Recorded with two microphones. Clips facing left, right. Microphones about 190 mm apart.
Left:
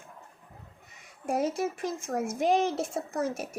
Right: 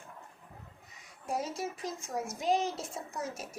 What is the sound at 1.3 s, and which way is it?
A woman's voice, 60° left (ahead or behind).